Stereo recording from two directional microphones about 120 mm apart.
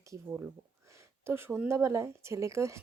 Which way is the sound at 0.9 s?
20° right (ahead or behind).